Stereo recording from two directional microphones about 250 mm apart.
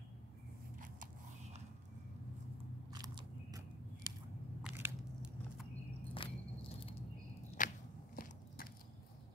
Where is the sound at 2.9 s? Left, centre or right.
Centre.